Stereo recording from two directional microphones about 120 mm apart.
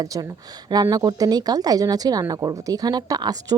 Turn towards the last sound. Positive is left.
turn(degrees=-30)  # may be behind; listen again after turning